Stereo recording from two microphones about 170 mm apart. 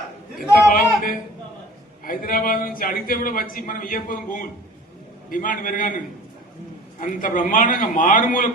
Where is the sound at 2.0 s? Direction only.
55° left (ahead or behind).